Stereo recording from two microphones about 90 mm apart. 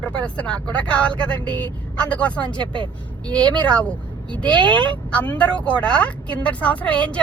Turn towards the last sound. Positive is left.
turn(degrees=15)  # may be behind; listen again after turning